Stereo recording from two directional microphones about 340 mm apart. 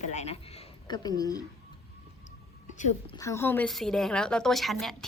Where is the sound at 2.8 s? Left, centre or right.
Centre.